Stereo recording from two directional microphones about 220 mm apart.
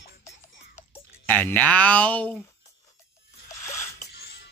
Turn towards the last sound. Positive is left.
turn(degrees=50)  # may be behind; listen again after turning